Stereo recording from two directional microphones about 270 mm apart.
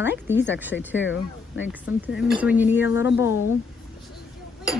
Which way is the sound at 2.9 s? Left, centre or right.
Left.